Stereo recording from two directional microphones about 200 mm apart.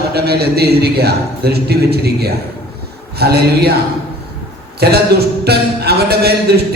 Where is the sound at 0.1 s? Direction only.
50° right (ahead or behind).